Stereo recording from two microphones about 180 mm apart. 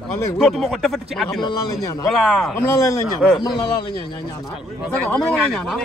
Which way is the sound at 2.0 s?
Centre (ahead or behind).